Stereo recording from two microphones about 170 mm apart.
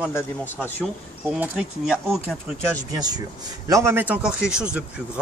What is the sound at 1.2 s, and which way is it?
Speech, 5° right (ahead or behind).